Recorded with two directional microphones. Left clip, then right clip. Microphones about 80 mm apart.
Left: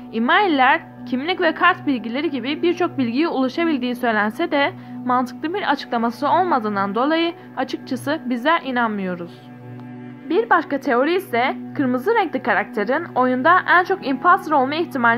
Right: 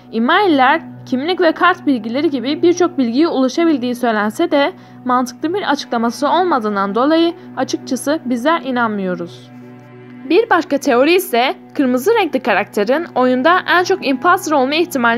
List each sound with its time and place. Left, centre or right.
0.3 s a woman's voice: right